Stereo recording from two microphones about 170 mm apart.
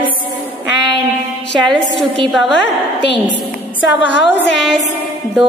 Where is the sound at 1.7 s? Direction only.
Centre (ahead or behind).